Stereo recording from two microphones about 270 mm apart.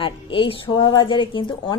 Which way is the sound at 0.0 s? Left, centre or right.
Centre.